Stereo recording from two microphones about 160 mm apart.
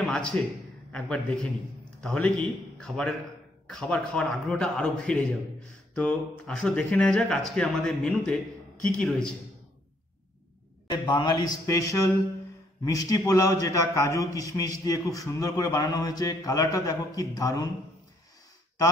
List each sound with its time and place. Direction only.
0.0 s a sound: 5° left (ahead or behind)
0.9 s a man's voice: 5° left (ahead or behind)
10.9 s a man's voice: 30° left (ahead or behind)